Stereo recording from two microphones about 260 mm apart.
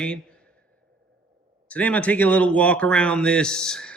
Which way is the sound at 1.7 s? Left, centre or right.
Centre.